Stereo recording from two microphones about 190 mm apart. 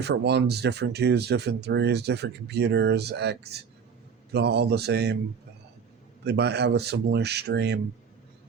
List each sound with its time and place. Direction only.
0.0 s speech: 60° right (ahead or behind)
6.2 s speech: 60° right (ahead or behind)